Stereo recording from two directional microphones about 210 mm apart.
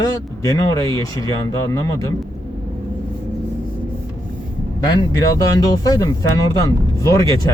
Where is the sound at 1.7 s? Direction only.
15° left (ahead or behind).